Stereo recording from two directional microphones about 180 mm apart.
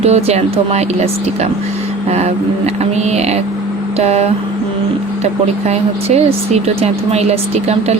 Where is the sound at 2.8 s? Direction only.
35° right (ahead or behind).